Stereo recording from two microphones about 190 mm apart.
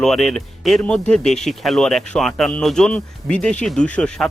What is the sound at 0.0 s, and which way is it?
Speech, centre (ahead or behind).